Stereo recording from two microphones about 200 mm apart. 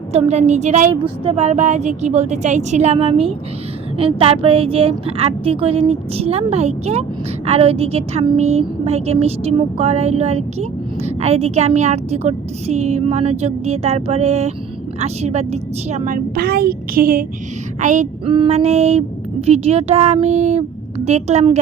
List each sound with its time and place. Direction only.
0.1 s a woman's voice: 30° right (ahead or behind)